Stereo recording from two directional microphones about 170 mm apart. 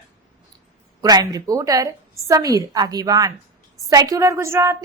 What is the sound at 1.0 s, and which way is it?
A woman's voice, 20° right (ahead or behind).